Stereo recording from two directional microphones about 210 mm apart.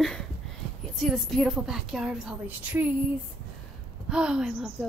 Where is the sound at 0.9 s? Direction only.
Centre (ahead or behind).